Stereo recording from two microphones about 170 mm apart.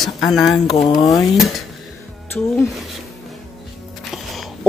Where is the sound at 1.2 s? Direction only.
Centre (ahead or behind).